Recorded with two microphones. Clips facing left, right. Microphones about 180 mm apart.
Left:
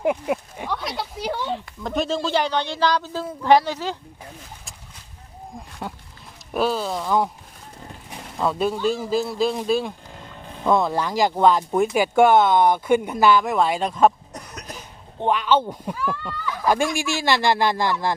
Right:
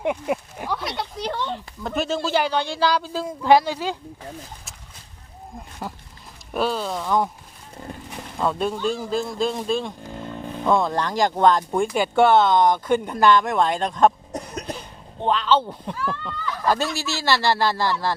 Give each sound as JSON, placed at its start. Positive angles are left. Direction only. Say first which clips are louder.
{"t": 0.0, "sound": "speech", "louder": "left 2 dB", "side_deg": 0}
{"t": 5.8, "sound": "speech", "louder": "even", "side_deg": 0}
{"t": 8.4, "sound": "speech", "louder": "left 1 dB", "side_deg": 5}
{"t": 14.3, "sound": "cough", "louder": "right 7 dB", "side_deg": -30}
{"t": 15.2, "sound": "speech", "louder": "left 1 dB", "side_deg": 10}